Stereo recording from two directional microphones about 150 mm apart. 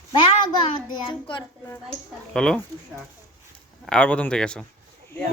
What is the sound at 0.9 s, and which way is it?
Speech, 30° left (ahead or behind).